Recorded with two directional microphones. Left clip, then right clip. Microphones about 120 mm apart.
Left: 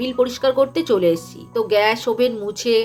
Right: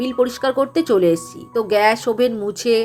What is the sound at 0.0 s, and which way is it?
Speech, 45° right (ahead or behind).